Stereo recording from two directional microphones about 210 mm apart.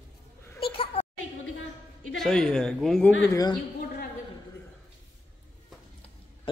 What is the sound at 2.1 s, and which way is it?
A man's voice, centre (ahead or behind).